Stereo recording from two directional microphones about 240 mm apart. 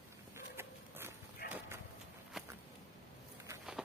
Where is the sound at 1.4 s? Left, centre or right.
Left.